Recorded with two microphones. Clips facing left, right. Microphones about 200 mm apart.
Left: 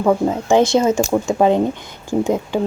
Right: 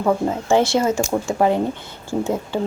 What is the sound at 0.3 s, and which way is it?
Speech, 15° left (ahead or behind).